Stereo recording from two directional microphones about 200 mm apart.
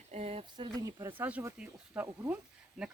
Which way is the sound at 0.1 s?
30° right (ahead or behind).